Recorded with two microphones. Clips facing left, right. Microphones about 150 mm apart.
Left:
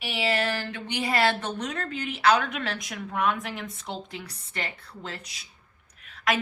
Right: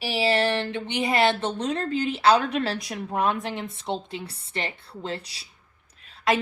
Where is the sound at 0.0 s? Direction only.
30° right (ahead or behind).